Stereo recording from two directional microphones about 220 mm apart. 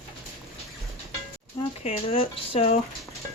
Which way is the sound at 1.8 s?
25° left (ahead or behind).